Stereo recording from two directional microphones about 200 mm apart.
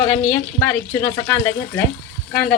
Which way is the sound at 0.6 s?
10° left (ahead or behind).